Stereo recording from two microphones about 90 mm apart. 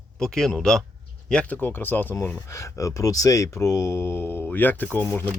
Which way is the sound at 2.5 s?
35° left (ahead or behind).